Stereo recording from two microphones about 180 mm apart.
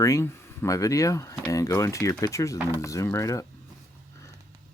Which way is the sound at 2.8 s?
15° left (ahead or behind).